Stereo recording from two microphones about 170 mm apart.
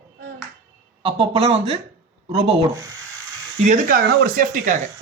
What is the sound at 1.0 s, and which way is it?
A man's voice, 35° right (ahead or behind).